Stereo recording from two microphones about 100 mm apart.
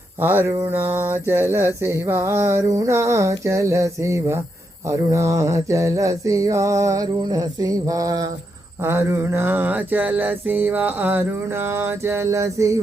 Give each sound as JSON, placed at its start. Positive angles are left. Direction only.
{"t": 0.2, "sound": "mantra", "side_deg": -20}
{"t": 4.9, "sound": "a sound", "side_deg": -30}
{"t": 8.8, "sound": "mantra", "side_deg": -30}